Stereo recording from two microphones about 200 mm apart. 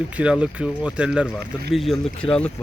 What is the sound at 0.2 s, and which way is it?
Speech, 5° right (ahead or behind).